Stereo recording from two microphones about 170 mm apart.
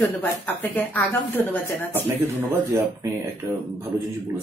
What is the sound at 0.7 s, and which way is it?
Speech, 10° left (ahead or behind).